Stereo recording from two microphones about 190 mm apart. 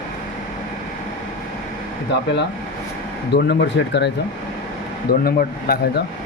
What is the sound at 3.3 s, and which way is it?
Speech, 65° left (ahead or behind).